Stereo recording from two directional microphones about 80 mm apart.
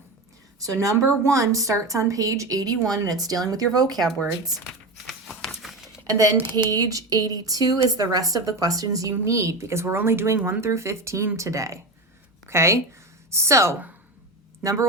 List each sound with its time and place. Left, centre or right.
0.6 s a woman's voice: right
3.9 s speech: centre
5.0 s a sound: centre
6.3 s speech: right
6.7 s a woman's voice: right